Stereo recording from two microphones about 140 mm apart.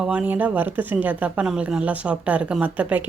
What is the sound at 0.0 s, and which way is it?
Speech, 10° right (ahead or behind).